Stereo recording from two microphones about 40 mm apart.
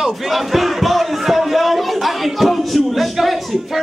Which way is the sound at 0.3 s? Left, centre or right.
Centre.